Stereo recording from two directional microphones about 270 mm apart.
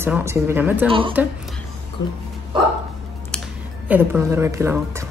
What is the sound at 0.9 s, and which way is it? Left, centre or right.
Speech, centre.